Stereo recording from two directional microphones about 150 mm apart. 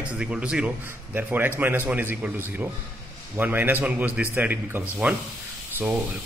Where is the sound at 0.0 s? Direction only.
5° right (ahead or behind).